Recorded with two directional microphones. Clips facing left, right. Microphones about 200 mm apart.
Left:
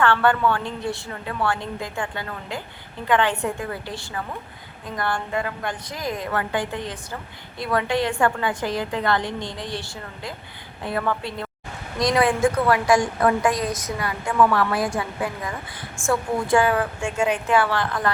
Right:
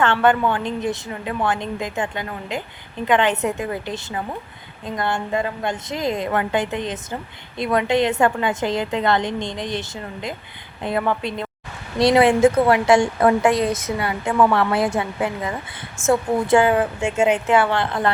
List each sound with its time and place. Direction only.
0.0 s a woman's voice: 20° right (ahead or behind)